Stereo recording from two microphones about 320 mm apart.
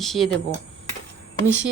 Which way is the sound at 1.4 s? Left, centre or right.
Right.